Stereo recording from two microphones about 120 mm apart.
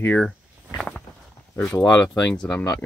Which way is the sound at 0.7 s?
5° left (ahead or behind).